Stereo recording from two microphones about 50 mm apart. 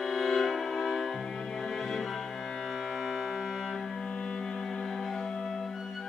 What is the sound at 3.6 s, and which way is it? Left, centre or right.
Music, centre.